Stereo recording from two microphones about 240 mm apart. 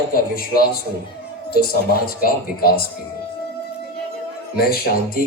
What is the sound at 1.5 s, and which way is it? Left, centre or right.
A woman's voice, left.